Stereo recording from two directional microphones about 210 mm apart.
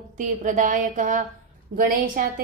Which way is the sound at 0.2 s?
35° right (ahead or behind).